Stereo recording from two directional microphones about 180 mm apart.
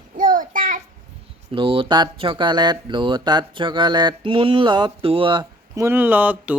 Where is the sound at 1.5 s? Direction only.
30° right (ahead or behind).